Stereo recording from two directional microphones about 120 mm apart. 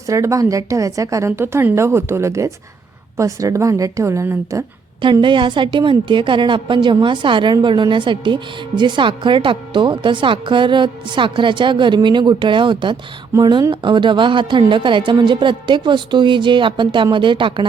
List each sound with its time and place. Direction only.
0.1 s a woman's voice: 25° right (ahead or behind)
5.2 s a woman's voice: 40° right (ahead or behind)